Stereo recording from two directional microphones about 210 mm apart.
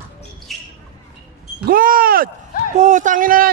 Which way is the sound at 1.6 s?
45° right (ahead or behind).